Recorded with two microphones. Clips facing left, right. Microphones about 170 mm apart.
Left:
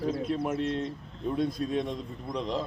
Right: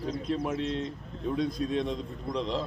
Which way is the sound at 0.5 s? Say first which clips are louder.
Left 1 dB; 50° left (ahead or behind).